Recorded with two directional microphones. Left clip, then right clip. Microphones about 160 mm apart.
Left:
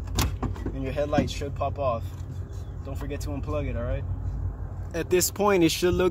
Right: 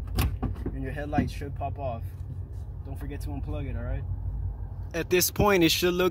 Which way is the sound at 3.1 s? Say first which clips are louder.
Left 7 dB; 25° left (ahead or behind).